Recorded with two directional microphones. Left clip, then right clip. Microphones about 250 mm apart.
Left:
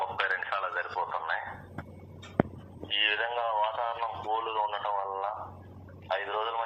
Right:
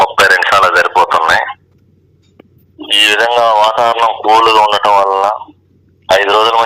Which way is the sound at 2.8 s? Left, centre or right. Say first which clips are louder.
Right 19 dB; right.